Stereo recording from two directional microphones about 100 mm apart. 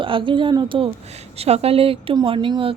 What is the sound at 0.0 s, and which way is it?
Speech, 60° right (ahead or behind).